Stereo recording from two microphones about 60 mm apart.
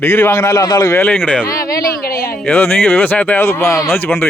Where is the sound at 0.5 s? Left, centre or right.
Left.